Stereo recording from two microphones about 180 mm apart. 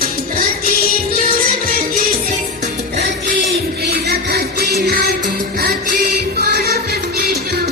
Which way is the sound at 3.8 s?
65° right (ahead or behind).